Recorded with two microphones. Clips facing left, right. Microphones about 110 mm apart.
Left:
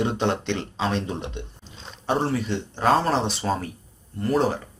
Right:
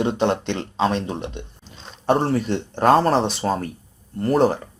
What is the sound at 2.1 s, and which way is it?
Speech, 50° right (ahead or behind).